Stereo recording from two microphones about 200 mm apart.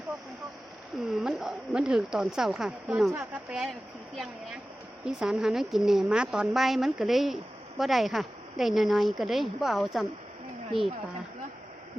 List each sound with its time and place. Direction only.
1.2 s a woman's voice: centre (ahead or behind)